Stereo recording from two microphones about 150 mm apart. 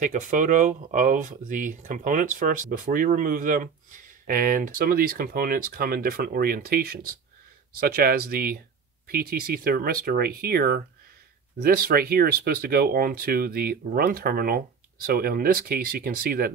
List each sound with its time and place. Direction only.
0.0 s speech: 60° right (ahead or behind); by 16.5 s 80° right